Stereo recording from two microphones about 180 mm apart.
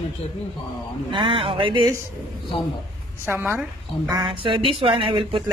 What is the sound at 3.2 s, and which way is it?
A woman's voice, 10° right (ahead or behind).